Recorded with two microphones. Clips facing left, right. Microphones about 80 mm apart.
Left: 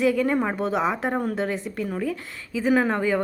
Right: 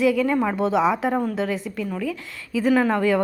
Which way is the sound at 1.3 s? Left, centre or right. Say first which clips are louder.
Right 1 dB; left.